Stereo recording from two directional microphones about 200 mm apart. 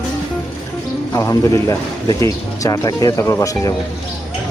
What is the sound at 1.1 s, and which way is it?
Speech, 15° left (ahead or behind).